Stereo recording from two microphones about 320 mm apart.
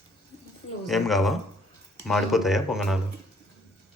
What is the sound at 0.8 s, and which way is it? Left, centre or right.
Speech, centre.